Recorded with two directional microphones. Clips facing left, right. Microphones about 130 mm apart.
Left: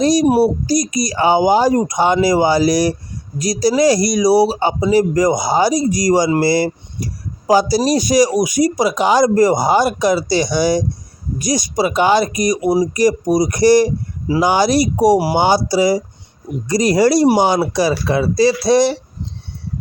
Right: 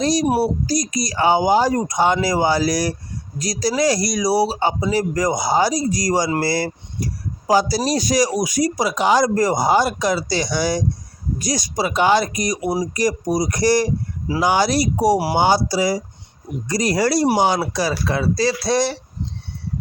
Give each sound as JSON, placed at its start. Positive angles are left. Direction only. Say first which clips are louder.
{"t": 0.0, "sound": "speech", "louder": "left 5 dB", "side_deg": 20}